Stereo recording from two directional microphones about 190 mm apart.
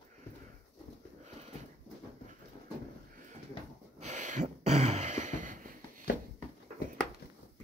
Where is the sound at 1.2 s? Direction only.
35° right (ahead or behind).